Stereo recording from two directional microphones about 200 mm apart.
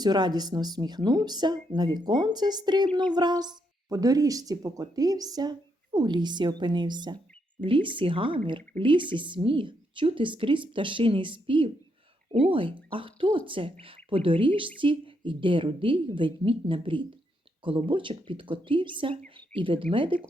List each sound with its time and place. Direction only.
0.0 s speech: 20° right (ahead or behind)